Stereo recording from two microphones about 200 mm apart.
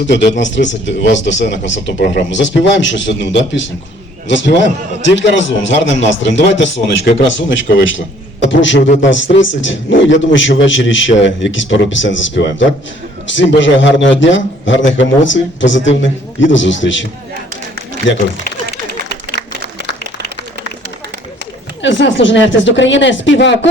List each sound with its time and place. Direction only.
0.1 s a man's voice: 65° left (ahead or behind)
19.0 s a sound: 55° left (ahead or behind)
21.8 s a man's voice: 65° left (ahead or behind)